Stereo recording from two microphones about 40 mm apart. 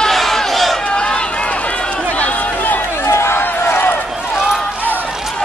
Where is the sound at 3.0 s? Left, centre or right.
Left.